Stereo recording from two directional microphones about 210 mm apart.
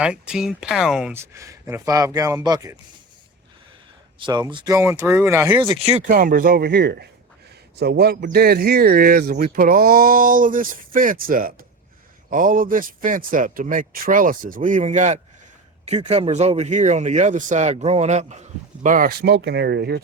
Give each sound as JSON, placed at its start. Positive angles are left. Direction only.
{"t": 0.0, "sound": "speech", "side_deg": -5}
{"t": 4.2, "sound": "speech", "side_deg": -20}
{"t": 6.1, "sound": "speech", "side_deg": -40}